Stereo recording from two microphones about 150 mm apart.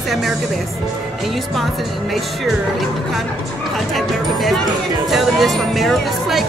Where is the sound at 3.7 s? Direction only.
Centre (ahead or behind).